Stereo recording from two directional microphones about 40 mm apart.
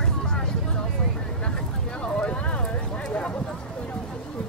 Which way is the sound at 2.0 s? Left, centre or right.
Left.